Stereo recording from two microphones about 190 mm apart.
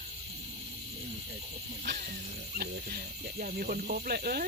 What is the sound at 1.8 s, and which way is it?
Speech, 55° right (ahead or behind).